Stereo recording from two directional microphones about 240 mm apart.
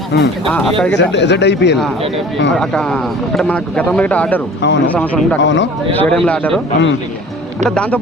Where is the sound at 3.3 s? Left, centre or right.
Centre.